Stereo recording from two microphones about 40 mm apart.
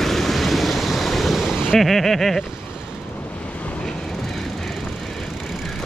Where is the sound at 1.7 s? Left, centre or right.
Centre.